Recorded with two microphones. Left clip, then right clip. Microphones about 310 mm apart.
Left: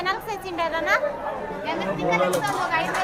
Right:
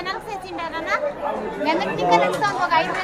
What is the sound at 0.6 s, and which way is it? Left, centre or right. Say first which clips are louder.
Speech: left 3 dB; centre.